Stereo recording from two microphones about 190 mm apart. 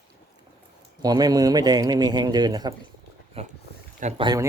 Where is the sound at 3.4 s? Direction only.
30° right (ahead or behind).